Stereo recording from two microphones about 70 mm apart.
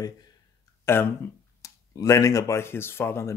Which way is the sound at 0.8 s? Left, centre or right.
Left.